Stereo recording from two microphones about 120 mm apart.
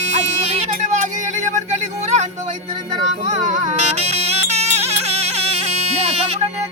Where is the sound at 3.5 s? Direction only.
90° right; by 5.3 s 65° right (ahead or behind).